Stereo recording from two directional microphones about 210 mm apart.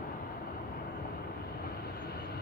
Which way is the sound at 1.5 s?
45° left (ahead or behind).